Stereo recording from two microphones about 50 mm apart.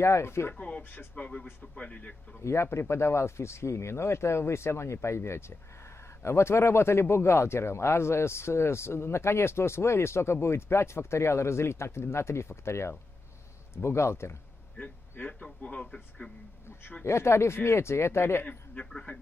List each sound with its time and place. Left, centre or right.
0.0 s speech: left
0.6 s speech: left
2.4 s speech: left
15.1 s a man's voice: left
15.6 s speech: left
17.0 s speech: left